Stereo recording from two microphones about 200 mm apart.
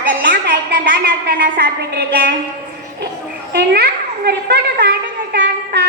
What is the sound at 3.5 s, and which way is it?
A woman's voice, 55° right (ahead or behind).